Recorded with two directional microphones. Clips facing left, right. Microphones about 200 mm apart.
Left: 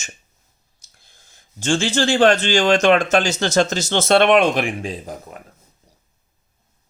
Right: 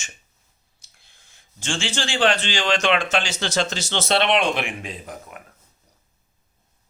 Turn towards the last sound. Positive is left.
turn(degrees=35)  # may be behind; listen again after turning